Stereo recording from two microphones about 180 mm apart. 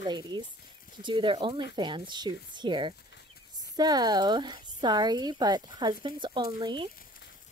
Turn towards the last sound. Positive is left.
turn(degrees=-25)  # may be behind; listen again after turning